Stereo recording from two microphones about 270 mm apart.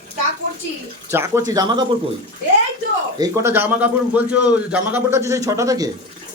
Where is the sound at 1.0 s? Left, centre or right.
Centre.